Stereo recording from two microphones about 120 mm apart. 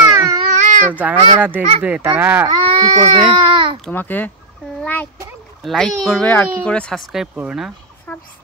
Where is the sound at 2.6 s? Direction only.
45° right (ahead or behind).